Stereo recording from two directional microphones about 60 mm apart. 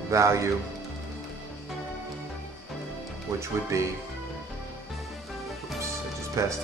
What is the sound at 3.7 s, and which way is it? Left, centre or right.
Speech, right.